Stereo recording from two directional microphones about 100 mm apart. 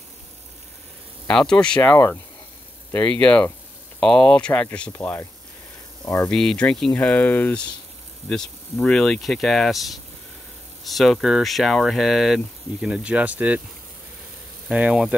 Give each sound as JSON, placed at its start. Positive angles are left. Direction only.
{"t": 1.2, "sound": "speech", "side_deg": 5}
{"t": 1.8, "sound": "speech", "side_deg": 20}
{"t": 2.9, "sound": "speech", "side_deg": 10}
{"t": 4.9, "sound": "speech", "side_deg": 20}
{"t": 6.0, "sound": "speech", "side_deg": 35}
{"t": 6.3, "sound": "speech", "side_deg": 5}
{"t": 14.7, "sound": "speech", "side_deg": -10}